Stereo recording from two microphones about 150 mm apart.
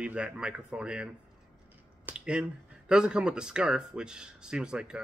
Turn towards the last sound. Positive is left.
turn(degrees=-5)  # may be behind; listen again after turning